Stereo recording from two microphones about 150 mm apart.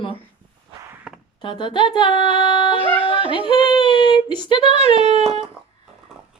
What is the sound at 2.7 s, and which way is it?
Speech, 35° right (ahead or behind).